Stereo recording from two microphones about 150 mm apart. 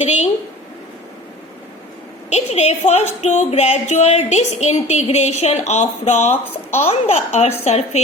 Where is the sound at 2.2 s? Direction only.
45° left (ahead or behind).